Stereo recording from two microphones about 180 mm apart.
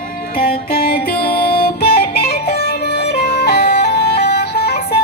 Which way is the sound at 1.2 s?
60° left (ahead or behind).